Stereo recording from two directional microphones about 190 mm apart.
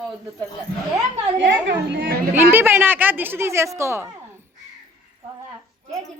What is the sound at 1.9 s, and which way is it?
Chatter, 50° right (ahead or behind).